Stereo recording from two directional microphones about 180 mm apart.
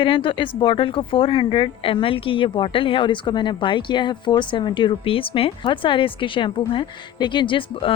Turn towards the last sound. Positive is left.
turn(degrees=30)  # may be behind; listen again after turning